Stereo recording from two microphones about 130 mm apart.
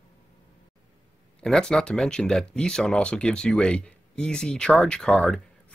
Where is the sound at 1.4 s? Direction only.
5° left (ahead or behind).